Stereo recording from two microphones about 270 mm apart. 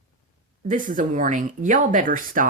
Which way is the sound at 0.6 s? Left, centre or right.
Right.